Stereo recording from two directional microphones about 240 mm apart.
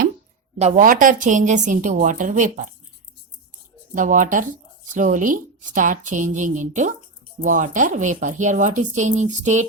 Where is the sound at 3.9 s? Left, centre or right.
Right.